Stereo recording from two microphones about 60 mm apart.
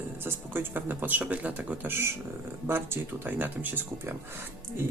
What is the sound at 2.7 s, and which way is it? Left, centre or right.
Speech, right.